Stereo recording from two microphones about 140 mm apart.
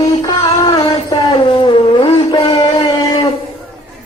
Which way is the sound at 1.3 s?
35° left (ahead or behind).